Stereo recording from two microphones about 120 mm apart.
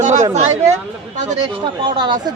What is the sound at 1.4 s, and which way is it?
Speech, 35° right (ahead or behind).